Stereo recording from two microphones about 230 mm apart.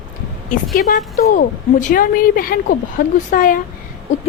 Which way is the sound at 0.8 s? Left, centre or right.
Left.